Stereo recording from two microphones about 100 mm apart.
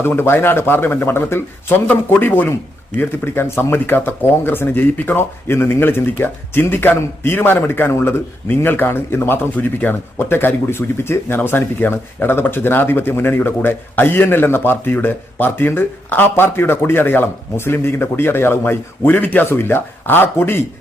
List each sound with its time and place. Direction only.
0.0 s speech: 20° left (ahead or behind)